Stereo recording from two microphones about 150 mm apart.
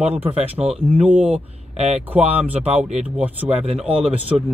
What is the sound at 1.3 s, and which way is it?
Speech, 45° right (ahead or behind).